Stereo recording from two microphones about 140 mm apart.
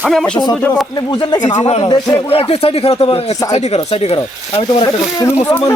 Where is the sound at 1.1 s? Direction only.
30° left (ahead or behind).